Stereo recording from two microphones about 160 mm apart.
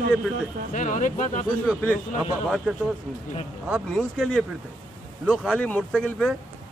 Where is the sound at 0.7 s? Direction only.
50° left (ahead or behind).